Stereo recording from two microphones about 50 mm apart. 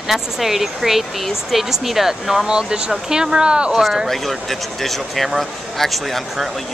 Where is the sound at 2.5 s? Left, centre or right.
Centre.